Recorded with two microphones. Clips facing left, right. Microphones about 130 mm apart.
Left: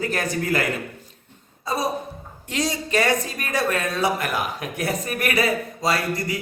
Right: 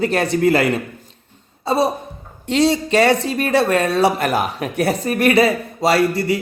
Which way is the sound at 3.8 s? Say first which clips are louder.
Right 7 dB; 70° right (ahead or behind).